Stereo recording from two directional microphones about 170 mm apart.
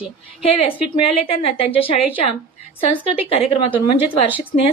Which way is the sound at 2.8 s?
35° left (ahead or behind).